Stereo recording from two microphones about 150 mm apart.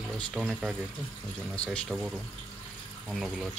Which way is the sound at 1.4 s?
5° left (ahead or behind).